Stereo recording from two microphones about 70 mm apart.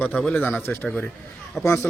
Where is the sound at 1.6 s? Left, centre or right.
Left.